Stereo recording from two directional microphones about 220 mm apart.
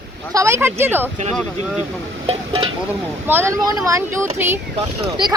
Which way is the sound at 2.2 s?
25° right (ahead or behind).